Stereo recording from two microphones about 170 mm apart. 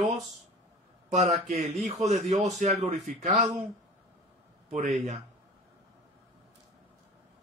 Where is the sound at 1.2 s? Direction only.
45° right (ahead or behind).